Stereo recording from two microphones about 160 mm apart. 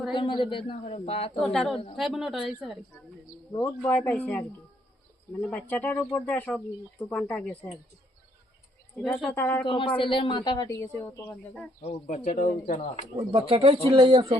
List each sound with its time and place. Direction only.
0.1 s speech: 30° left (ahead or behind)
1.4 s speech: centre (ahead or behind)
3.6 s speech: 10° left (ahead or behind)
9.1 s speech: 10° left (ahead or behind)
9.6 s speech: 35° left (ahead or behind)
10.8 s speech: 15° left (ahead or behind)
11.8 s speech: 40° left (ahead or behind)
13.1 s speech: 40° right (ahead or behind)